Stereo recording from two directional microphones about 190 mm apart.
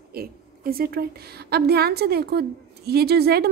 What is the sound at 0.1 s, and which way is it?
A woman's voice, 55° right (ahead or behind).